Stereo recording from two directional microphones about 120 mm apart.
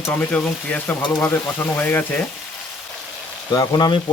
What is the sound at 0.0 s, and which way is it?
Speech, 15° left (ahead or behind).